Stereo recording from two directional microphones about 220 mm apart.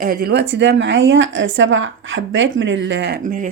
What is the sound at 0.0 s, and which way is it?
A woman's voice, 40° right (ahead or behind).